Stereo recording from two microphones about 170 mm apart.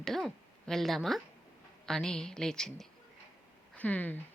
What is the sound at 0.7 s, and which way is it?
A woman's voice, centre (ahead or behind).